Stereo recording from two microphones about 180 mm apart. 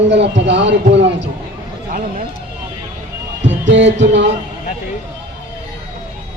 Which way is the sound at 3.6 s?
90° right.